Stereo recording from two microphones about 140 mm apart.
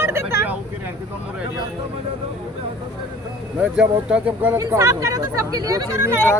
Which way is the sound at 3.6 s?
5° right (ahead or behind).